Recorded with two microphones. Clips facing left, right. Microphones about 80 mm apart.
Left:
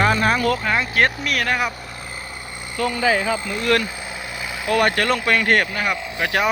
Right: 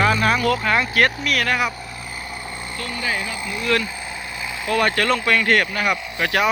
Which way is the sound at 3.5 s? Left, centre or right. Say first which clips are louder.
Right 1 dB; left.